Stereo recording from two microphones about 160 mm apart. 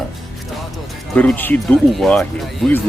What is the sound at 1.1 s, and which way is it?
Speech, 10° left (ahead or behind).